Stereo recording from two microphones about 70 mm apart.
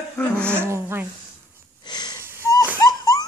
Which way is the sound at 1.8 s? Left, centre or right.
Left.